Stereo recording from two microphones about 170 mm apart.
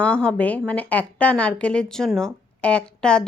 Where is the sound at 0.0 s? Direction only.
5° left (ahead or behind).